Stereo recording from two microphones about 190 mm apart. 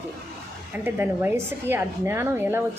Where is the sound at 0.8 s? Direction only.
10° right (ahead or behind).